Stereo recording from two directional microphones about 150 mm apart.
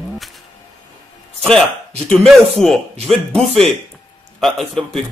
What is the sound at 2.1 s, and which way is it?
Speech, 5° left (ahead or behind).